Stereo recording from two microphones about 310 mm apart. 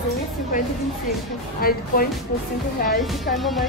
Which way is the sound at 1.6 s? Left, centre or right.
Left.